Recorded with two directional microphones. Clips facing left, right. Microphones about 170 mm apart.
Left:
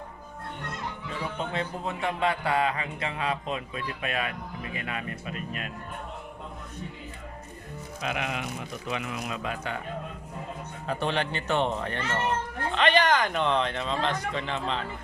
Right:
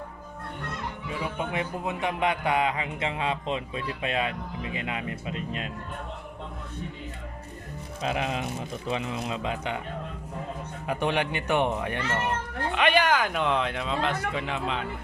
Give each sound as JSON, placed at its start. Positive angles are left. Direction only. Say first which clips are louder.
{"t": 1.2, "sound": "a man's voice", "louder": "right 1 dB", "side_deg": -10}
{"t": 8.0, "sound": "a man's voice", "louder": "right 3 dB", "side_deg": -30}
{"t": 10.8, "sound": "speech", "louder": "right 2 dB", "side_deg": -15}